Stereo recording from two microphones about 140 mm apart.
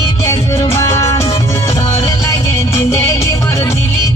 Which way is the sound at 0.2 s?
20° left (ahead or behind).